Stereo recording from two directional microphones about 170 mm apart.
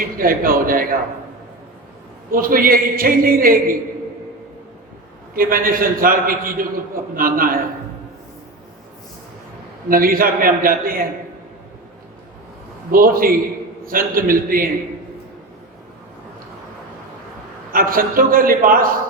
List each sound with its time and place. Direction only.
0.2 s a man's voice: 55° right (ahead or behind)
2.3 s a man's voice: 55° right (ahead or behind)
5.3 s a man's voice: 55° right (ahead or behind)
9.9 s a man's voice: 55° right (ahead or behind)
12.9 s a man's voice: 55° right (ahead or behind)
17.7 s a man's voice: 55° right (ahead or behind)